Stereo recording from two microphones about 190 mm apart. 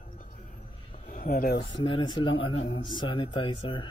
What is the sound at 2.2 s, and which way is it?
Speech, 90° left.